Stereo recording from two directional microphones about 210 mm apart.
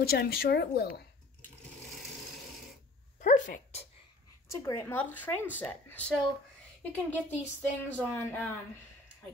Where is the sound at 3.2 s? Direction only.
35° left (ahead or behind).